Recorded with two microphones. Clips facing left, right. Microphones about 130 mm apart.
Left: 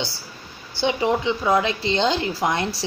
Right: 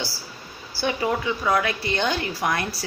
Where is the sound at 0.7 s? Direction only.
20° left (ahead or behind).